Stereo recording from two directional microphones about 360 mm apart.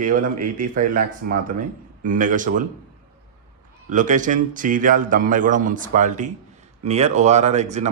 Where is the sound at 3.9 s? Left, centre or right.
Right.